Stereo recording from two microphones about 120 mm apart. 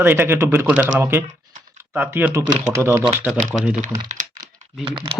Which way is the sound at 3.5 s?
5° right (ahead or behind).